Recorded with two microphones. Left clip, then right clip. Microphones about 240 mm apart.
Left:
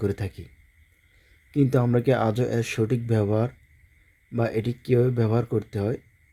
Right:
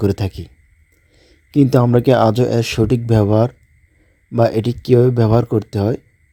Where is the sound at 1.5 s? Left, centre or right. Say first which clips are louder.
Right 9 dB; right.